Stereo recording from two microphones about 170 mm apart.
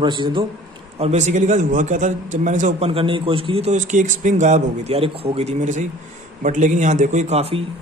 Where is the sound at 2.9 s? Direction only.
30° right (ahead or behind).